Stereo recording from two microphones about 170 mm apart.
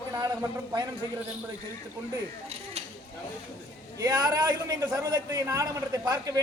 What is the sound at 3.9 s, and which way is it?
A man's voice, 20° right (ahead or behind).